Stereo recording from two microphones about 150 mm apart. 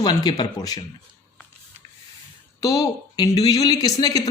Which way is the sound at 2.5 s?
25° left (ahead or behind).